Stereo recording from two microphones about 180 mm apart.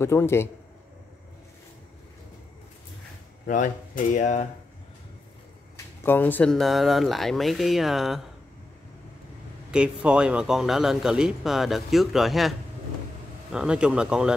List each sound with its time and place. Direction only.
0.0 s a man's voice: 15° left (ahead or behind)
3.4 s speech: 45° left (ahead or behind)
6.0 s a man's voice: 10° left (ahead or behind)
9.7 s a man's voice: 5° right (ahead or behind)